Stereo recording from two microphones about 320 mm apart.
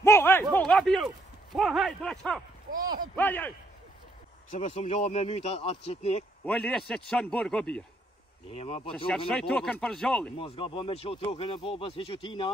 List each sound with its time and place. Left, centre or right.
0.0 s speech: centre
2.7 s speech: centre
3.2 s speech: centre
4.5 s speech: centre
6.4 s speech: centre
8.5 s speech: centre
8.9 s speech: centre
10.3 s speech: centre